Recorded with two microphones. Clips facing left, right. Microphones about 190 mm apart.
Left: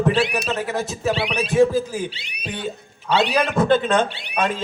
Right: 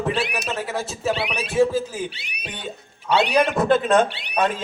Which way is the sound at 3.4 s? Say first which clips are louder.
Right 1 dB; centre (ahead or behind).